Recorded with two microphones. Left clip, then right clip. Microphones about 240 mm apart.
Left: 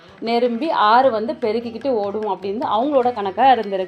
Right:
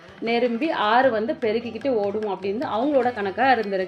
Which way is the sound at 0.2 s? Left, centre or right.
Centre.